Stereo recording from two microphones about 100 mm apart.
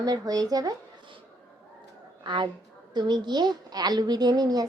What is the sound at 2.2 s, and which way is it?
A woman's voice, 50° right (ahead or behind).